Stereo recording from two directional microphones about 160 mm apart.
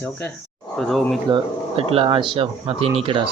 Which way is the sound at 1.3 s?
30° right (ahead or behind).